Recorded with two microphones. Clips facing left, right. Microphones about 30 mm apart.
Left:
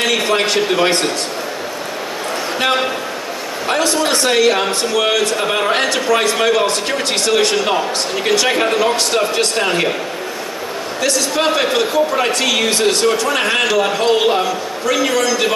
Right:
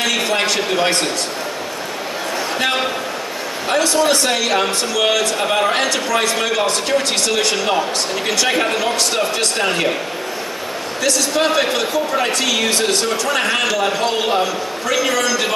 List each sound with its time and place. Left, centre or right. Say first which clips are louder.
0.1 s speech: left 2 dB; centre
3.6 s speech: right 1 dB; centre
11.0 s speech: even; centre